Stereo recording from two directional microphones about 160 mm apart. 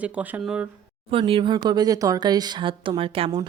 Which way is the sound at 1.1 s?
35° right (ahead or behind).